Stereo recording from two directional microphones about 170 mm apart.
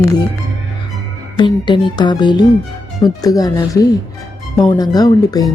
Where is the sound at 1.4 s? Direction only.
25° left (ahead or behind).